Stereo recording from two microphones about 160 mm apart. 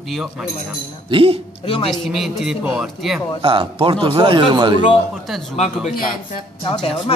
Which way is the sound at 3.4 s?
35° right (ahead or behind).